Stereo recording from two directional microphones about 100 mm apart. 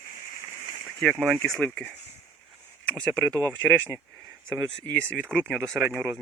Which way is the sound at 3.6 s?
20° right (ahead or behind).